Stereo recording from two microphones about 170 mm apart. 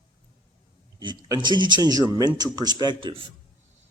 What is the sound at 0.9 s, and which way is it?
Speech, 25° right (ahead or behind).